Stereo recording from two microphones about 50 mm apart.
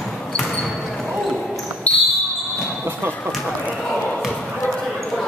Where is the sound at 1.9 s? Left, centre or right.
Left.